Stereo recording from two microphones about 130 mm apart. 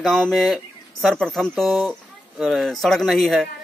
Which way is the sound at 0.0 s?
Centre (ahead or behind).